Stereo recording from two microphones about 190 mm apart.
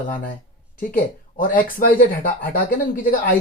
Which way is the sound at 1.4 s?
45° left (ahead or behind).